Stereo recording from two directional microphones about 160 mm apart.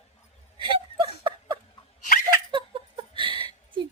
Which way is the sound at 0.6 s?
30° right (ahead or behind).